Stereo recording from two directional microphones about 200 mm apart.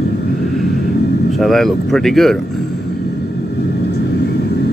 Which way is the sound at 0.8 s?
55° left (ahead or behind).